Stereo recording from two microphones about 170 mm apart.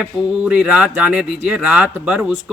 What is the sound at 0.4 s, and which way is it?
A man's voice, 5° right (ahead or behind).